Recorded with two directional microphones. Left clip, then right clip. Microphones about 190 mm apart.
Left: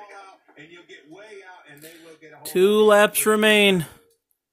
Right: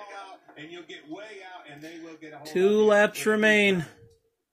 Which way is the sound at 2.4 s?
35° left (ahead or behind).